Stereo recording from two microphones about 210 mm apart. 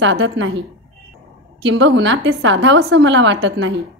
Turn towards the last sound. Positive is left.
turn(degrees=-60)  # may be behind; listen again after turning